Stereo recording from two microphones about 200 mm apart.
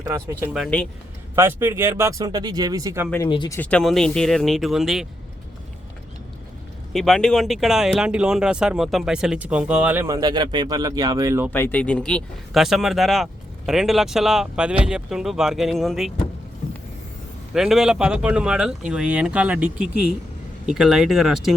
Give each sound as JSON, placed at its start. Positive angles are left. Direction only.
{"t": 0.0, "sound": "speech", "side_deg": -15}
{"t": 0.5, "sound": "speech", "side_deg": 0}
{"t": 1.4, "sound": "speech", "side_deg": -10}
{"t": 3.2, "sound": "speech", "side_deg": 25}
{"t": 3.6, "sound": "speech", "side_deg": 5}
{"t": 6.9, "sound": "speech", "side_deg": 0}
{"t": 11.5, "sound": "speech", "side_deg": 10}
{"t": 17.5, "sound": "speech", "side_deg": 0}